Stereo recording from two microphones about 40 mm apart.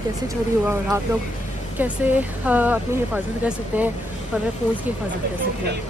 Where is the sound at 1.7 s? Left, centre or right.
Right.